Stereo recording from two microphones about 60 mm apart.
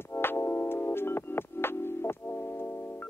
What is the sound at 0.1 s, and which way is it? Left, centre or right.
Music, left.